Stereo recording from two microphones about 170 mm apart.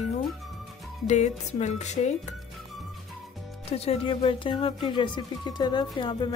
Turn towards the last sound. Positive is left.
turn(degrees=25)  # may be behind; listen again after turning